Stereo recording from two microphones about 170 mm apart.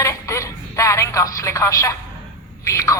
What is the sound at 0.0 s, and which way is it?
Telephone, 15° left (ahead or behind).